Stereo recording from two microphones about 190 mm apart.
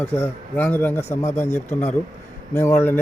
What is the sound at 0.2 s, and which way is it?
A man's voice, 10° left (ahead or behind).